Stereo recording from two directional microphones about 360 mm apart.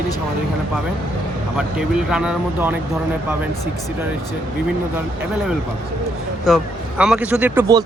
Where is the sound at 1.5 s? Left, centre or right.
Centre.